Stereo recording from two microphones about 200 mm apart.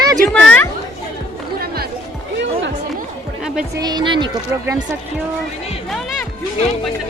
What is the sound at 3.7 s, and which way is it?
Music, 20° right (ahead or behind).